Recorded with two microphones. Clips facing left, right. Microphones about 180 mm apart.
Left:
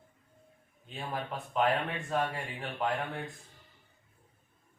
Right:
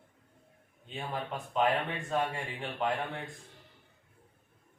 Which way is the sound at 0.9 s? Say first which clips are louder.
Even; 5° left (ahead or behind).